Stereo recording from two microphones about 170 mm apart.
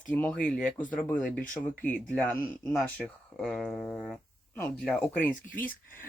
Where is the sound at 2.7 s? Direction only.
Centre (ahead or behind).